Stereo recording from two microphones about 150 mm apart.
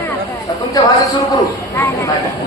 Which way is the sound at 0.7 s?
20° left (ahead or behind).